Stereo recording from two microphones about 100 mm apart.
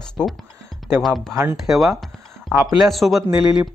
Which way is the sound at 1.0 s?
Centre (ahead or behind).